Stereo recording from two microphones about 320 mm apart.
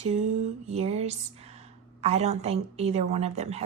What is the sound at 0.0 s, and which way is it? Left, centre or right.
Speech, right.